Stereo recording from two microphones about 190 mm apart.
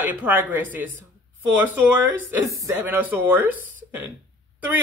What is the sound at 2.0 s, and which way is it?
Speech, 15° right (ahead or behind).